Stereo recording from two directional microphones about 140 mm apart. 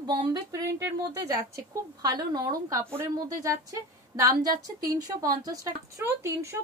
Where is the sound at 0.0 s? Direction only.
30° right (ahead or behind).